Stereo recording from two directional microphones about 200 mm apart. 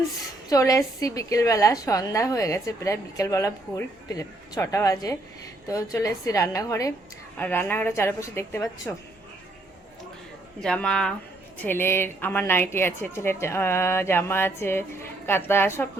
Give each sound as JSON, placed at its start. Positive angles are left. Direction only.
{"t": 0.5, "sound": "a woman's voice", "side_deg": 15}
{"t": 10.6, "sound": "a woman's voice", "side_deg": 5}